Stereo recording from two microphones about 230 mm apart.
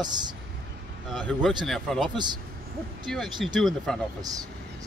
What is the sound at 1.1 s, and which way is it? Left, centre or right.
A man's voice, centre.